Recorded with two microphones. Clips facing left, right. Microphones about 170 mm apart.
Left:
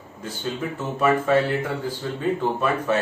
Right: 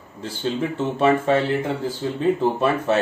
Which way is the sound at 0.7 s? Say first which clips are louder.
Right 2 dB; 25° right (ahead or behind).